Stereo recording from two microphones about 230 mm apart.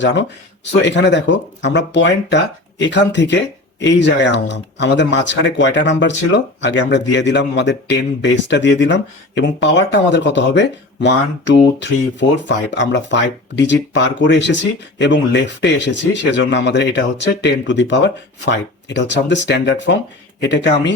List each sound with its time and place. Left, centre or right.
0.0 s speech: left